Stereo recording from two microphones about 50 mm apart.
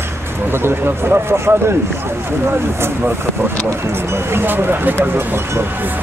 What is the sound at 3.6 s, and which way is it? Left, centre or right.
Speech, right.